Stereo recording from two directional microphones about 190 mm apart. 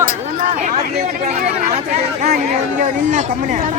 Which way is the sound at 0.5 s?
40° right (ahead or behind).